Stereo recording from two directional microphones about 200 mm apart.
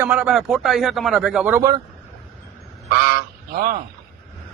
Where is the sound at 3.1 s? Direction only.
45° right (ahead or behind).